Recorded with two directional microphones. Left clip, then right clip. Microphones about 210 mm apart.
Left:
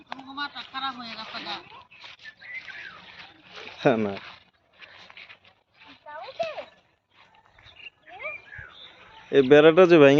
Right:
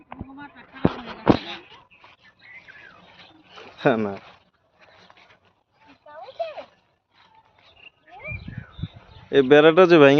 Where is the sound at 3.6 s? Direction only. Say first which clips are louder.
Right 1 dB; 5° right (ahead or behind).